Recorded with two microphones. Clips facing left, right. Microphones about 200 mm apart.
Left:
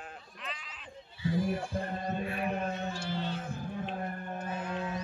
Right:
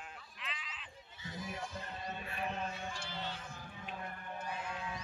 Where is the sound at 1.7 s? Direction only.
50° left (ahead or behind).